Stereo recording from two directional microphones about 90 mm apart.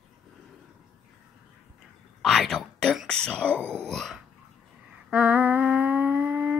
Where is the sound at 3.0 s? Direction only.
10° left (ahead or behind).